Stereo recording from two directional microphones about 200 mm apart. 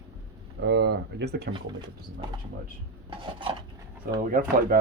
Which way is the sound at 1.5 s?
25° right (ahead or behind).